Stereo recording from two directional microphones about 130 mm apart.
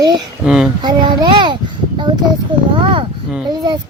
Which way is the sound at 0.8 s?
35° right (ahead or behind).